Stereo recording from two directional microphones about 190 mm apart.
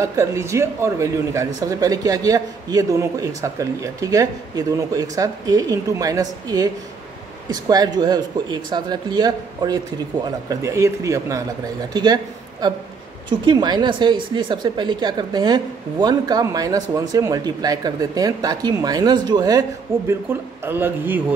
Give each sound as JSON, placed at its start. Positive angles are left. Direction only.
{"t": 0.0, "sound": "a man's voice", "side_deg": -15}
{"t": 20.6, "sound": "a man's voice", "side_deg": -10}